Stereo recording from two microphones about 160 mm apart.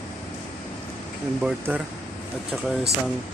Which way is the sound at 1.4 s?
5° right (ahead or behind).